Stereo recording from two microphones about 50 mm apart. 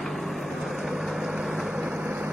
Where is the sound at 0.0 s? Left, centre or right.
Centre.